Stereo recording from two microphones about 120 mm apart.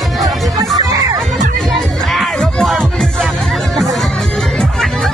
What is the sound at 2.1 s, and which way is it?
Music, 5° left (ahead or behind).